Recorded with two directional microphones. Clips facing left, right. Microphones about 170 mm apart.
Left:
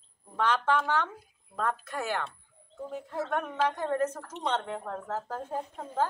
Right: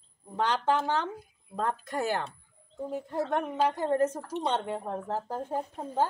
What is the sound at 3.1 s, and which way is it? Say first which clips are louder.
Speech: right 2 dB; 15° right (ahead or behind).